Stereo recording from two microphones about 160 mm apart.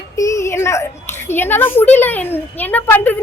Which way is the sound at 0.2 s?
20° left (ahead or behind).